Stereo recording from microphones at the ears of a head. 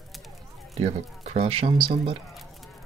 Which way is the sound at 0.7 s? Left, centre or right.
Right.